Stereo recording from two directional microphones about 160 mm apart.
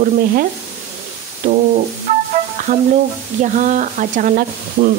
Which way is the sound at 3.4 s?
50° right (ahead or behind).